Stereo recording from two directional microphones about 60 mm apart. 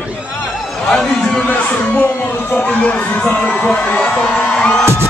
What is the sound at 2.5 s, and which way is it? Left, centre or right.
Crowd, left.